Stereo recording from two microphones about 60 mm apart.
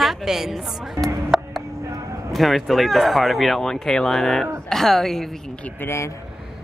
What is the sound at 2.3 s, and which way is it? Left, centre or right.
Speech, centre.